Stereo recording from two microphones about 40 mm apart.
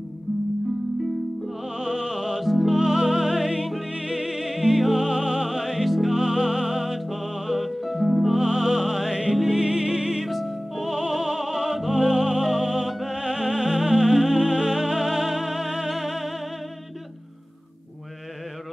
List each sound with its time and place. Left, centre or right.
1.7 s music: centre
2.4 s music: centre
6.1 s music: centre
10.2 s music: centre
13.1 s music: centre